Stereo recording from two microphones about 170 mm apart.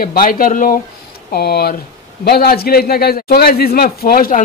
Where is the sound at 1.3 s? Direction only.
70° left (ahead or behind).